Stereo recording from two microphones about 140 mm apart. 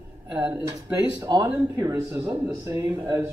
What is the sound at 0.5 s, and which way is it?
Speech, 25° right (ahead or behind).